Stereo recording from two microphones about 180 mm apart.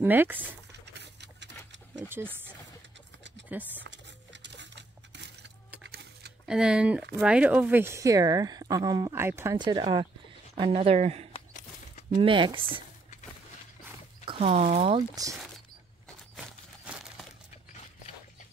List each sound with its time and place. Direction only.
0.0 s speech: 10° right (ahead or behind)
0.9 s a sound: 75° right (ahead or behind)
2.0 s speech: 10° right (ahead or behind)
3.8 s coin: 85° right
6.4 s speech: 5° right (ahead or behind)
9.6 s speech: 25° right (ahead or behind)
14.4 s speech: 40° right (ahead or behind)
16.3 s crumpling: 5° right (ahead or behind)